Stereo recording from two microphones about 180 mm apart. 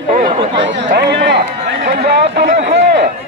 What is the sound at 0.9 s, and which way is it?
A man's voice, 65° right (ahead or behind).